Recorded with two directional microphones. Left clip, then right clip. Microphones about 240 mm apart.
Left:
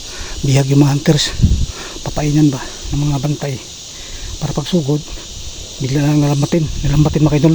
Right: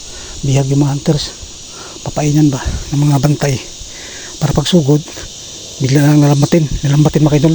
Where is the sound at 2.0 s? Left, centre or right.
Centre.